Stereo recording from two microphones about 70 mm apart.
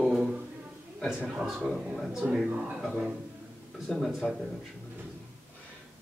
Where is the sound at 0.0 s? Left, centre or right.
Centre.